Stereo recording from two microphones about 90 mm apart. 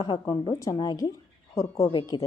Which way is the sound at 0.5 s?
40° left (ahead or behind).